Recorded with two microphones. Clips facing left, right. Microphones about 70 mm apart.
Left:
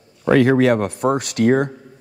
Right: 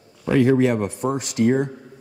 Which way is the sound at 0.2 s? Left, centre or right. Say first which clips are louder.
Left 3 dB; left.